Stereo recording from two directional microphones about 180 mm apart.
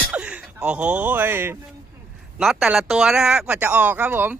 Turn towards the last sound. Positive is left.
turn(degrees=-10)  # may be behind; listen again after turning